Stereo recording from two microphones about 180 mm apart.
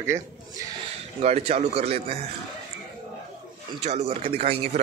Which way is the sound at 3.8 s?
40° right (ahead or behind).